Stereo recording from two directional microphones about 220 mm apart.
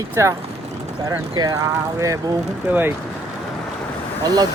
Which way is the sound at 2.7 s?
10° right (ahead or behind).